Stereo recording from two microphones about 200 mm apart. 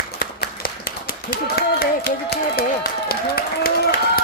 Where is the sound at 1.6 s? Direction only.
50° left (ahead or behind).